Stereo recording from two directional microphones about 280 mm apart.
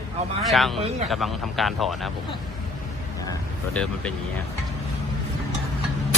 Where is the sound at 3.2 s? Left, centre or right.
Centre.